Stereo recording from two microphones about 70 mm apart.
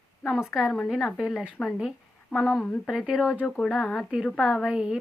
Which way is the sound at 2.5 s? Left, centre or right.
Centre.